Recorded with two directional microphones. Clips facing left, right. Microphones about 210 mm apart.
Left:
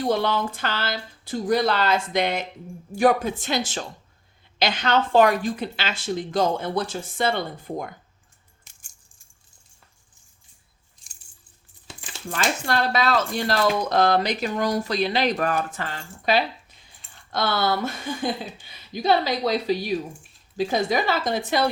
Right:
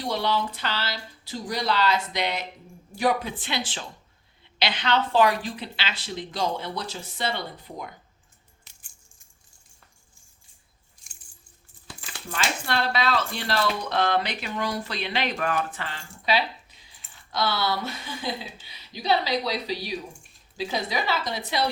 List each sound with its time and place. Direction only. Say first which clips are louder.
0.0 s speech: left 4 dB; 50° left (ahead or behind)
8.6 s music: even; 45° left (ahead or behind)
11.9 s a sound: left 1 dB; 25° left (ahead or behind)
12.4 s speech: left 3 dB; 45° left (ahead or behind)